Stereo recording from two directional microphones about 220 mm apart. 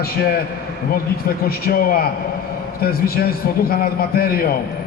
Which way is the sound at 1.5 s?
40° left (ahead or behind).